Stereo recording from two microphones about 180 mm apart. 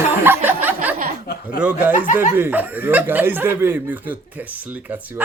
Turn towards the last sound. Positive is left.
turn(degrees=-10)  # may be behind; listen again after turning